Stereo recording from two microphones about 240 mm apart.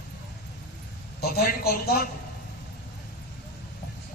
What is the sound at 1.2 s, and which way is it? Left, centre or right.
Speech, left.